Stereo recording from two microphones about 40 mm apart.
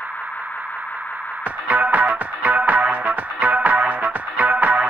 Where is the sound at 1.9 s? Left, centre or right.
Right.